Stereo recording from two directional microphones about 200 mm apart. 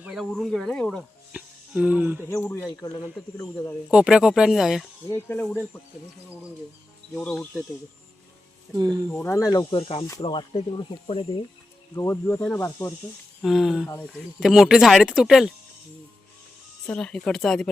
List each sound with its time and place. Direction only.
0.0 s speech: centre (ahead or behind)
2.3 s speech: 10° left (ahead or behind)
3.8 s speech: 5° right (ahead or behind)
5.0 s speech: 10° left (ahead or behind)
7.1 s speech: 5° left (ahead or behind)
8.7 s speech: 20° right (ahead or behind)
9.0 s speech: 10° left (ahead or behind); by 11.3 s 30° left (ahead or behind)
11.9 s speech: 10° left (ahead or behind)
13.4 s speech: centre (ahead or behind)
16.8 s speech: 5° left (ahead or behind)